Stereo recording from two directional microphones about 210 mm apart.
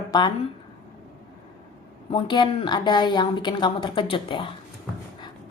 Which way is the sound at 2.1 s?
20° left (ahead or behind).